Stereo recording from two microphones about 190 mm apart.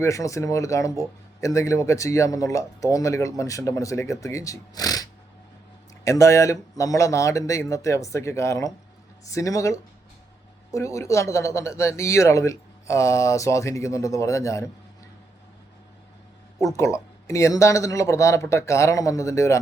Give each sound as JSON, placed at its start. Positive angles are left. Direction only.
{"t": 0.0, "sound": "speech", "side_deg": 15}
{"t": 6.1, "sound": "speech", "side_deg": 15}
{"t": 16.6, "sound": "speech", "side_deg": 15}